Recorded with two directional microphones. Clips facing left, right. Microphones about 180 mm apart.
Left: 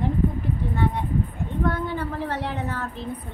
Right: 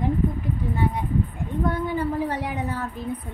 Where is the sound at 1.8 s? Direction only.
10° right (ahead or behind).